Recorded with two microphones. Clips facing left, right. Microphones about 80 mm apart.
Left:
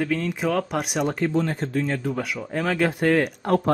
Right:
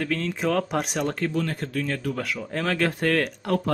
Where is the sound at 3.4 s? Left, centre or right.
Left.